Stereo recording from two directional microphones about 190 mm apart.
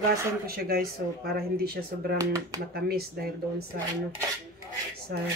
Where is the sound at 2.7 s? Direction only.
55° right (ahead or behind).